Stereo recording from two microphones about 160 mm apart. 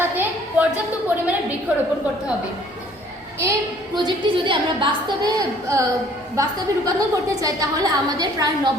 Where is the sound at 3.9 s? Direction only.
30° right (ahead or behind).